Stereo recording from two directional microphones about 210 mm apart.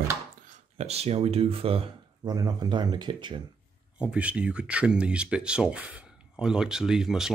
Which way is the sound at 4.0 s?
5° right (ahead or behind).